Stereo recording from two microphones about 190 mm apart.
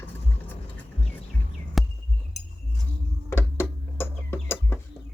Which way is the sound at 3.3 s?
10° left (ahead or behind).